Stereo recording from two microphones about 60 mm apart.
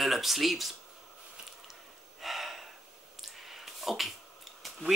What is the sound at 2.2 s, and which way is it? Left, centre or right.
Snort, centre.